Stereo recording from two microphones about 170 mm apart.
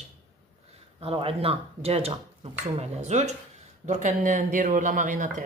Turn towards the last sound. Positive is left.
turn(degrees=-50)  # may be behind; listen again after turning